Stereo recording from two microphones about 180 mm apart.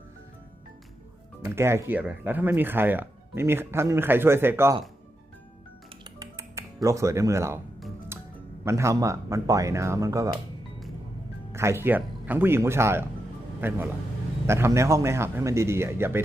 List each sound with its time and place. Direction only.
1.5 s speech: 15° right (ahead or behind)
6.1 s music: 15° right (ahead or behind)
6.8 s speech: 15° right (ahead or behind)
8.1 s music: 15° right (ahead or behind)
8.6 s speech: 15° right (ahead or behind)
11.5 s speech: 15° right (ahead or behind)